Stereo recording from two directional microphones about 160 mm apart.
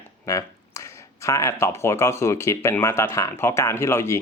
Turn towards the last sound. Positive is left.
turn(degrees=15)  # may be behind; listen again after turning